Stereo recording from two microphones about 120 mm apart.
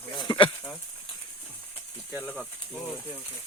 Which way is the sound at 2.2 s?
5° left (ahead or behind).